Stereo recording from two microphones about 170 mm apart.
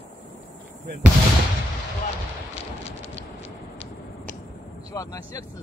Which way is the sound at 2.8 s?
35° left (ahead or behind).